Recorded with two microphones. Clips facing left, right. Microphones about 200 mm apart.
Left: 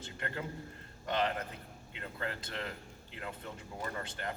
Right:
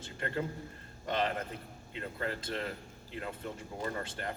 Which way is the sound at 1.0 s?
25° right (ahead or behind).